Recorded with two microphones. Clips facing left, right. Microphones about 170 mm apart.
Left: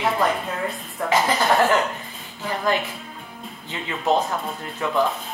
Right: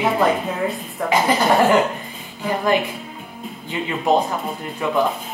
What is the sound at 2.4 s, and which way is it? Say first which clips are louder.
Music: right 4 dB; 15° right (ahead or behind).